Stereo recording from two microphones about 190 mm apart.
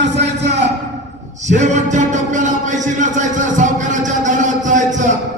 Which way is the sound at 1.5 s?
40° right (ahead or behind).